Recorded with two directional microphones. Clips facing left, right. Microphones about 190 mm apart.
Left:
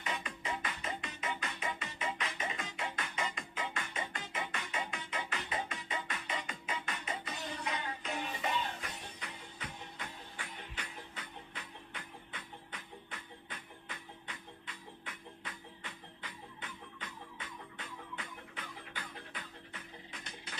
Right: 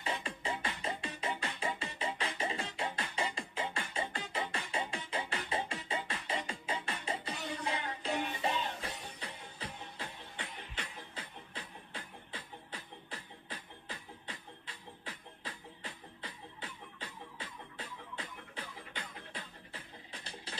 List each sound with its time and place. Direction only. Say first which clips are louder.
0.0 s music: right 2 dB; 30° right (ahead or behind)